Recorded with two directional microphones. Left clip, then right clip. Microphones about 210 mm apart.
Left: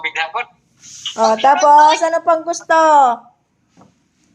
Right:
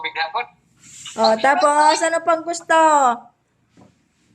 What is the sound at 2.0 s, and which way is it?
A woman's voice, 5° right (ahead or behind).